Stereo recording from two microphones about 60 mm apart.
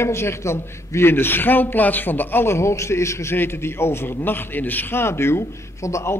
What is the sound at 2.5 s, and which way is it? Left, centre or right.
Speech, left.